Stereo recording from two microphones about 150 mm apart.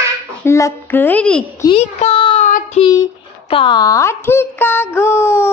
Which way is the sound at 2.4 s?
55° left (ahead or behind).